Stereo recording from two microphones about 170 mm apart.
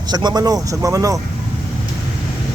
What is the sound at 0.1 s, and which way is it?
Speech, 25° right (ahead or behind).